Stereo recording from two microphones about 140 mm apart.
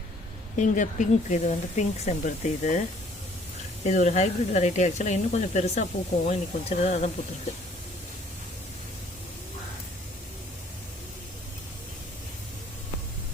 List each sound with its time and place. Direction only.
0.5 s speech: 60° left (ahead or behind)
3.8 s speech: 55° left (ahead or behind)